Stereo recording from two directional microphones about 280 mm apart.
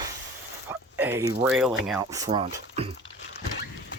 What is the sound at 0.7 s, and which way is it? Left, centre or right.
Speech, centre.